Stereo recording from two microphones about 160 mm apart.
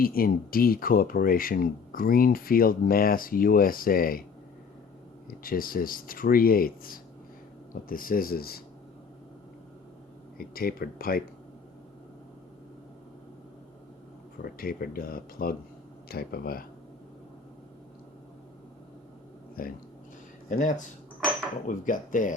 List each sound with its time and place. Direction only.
0.0 s speech: 65° left (ahead or behind)
5.3 s speech: 65° left (ahead or behind)
10.3 s speech: 70° left (ahead or behind)
14.4 s speech: 65° left (ahead or behind)
16.0 s speech: 75° left (ahead or behind)
19.6 s speech: 65° left (ahead or behind)